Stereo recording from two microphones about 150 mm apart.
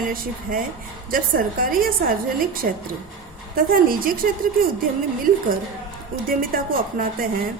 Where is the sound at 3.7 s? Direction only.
75° right (ahead or behind).